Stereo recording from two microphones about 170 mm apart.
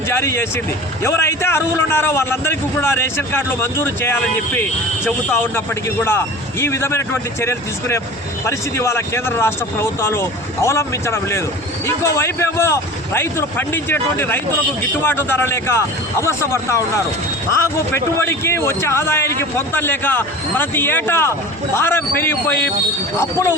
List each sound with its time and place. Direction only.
0.1 s a man's voice: 15° left (ahead or behind)